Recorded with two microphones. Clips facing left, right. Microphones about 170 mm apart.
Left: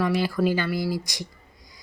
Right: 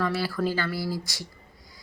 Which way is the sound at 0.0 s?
15° left (ahead or behind).